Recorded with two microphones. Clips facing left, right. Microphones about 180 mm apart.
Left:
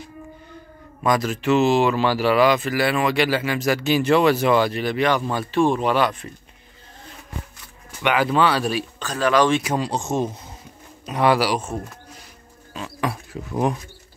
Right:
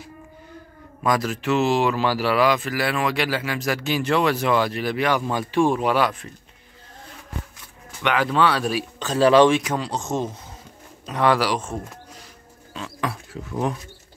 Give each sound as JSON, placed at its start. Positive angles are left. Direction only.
{"t": 1.0, "sound": "speech", "side_deg": 0}
{"t": 8.0, "sound": "speech", "side_deg": 5}
{"t": 9.0, "sound": "speech", "side_deg": -25}
{"t": 9.6, "sound": "speech", "side_deg": 10}
{"t": 12.7, "sound": "a sound", "side_deg": 15}